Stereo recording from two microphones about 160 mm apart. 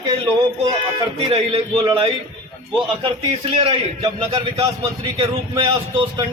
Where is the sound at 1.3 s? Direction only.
40° right (ahead or behind).